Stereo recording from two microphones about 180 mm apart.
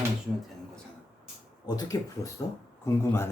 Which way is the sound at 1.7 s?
20° left (ahead or behind).